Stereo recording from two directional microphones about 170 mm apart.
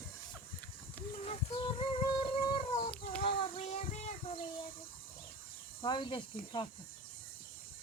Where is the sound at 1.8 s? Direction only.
35° left (ahead or behind).